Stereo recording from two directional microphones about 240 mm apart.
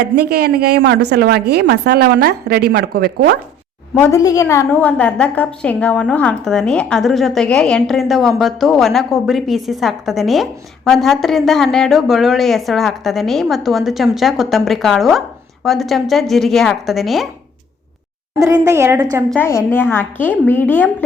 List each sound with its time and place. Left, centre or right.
0.0 s a man's voice: right
4.0 s a woman's voice: centre
18.3 s a woman's voice: centre
19.3 s a woman's voice: centre